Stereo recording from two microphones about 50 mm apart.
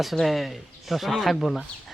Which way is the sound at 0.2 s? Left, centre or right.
Centre.